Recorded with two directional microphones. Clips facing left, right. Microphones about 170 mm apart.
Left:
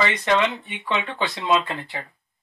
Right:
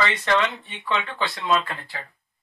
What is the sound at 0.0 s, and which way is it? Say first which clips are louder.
Speech: left 2 dB; 15° left (ahead or behind).